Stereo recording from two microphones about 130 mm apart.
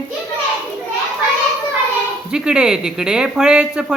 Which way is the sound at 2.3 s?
5° right (ahead or behind).